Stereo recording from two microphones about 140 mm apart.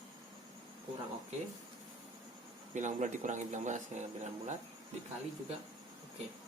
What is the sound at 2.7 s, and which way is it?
Speech, 60° right (ahead or behind).